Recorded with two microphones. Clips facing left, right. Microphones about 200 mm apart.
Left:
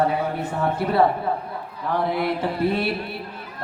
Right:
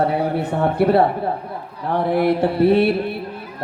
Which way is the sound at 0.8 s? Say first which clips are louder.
Right 4 dB; 65° right (ahead or behind).